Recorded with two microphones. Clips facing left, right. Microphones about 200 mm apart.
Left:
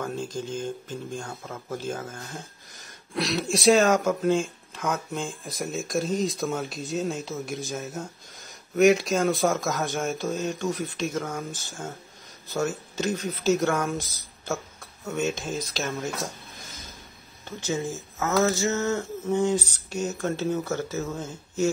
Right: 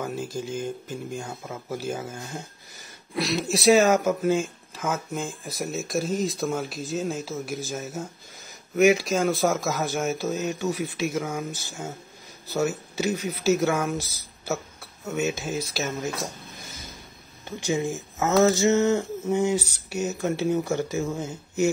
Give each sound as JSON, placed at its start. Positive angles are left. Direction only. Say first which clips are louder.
{"t": 0.0, "sound": "speech", "louder": "right 1 dB", "side_deg": -10}
{"t": 17.5, "sound": "speech", "louder": "right 3 dB", "side_deg": -15}